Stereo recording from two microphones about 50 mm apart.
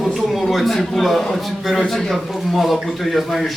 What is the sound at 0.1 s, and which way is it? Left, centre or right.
A man's voice, centre.